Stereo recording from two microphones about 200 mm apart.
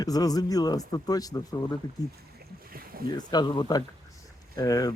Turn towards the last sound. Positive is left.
turn(degrees=20)  # may be behind; listen again after turning